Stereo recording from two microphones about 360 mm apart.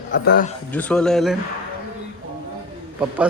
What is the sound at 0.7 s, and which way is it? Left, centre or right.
Speech, centre.